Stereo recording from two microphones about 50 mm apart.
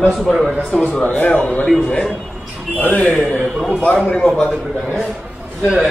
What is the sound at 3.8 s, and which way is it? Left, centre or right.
Speech, left.